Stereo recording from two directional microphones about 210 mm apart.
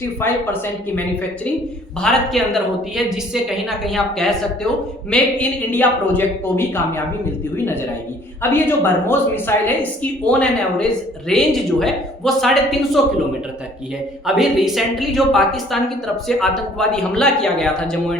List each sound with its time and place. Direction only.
0.2 s a woman's voice: 10° left (ahead or behind)
14.3 s a woman's voice: centre (ahead or behind)